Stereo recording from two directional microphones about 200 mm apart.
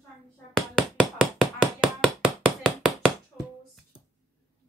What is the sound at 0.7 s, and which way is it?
Hammer, centre (ahead or behind).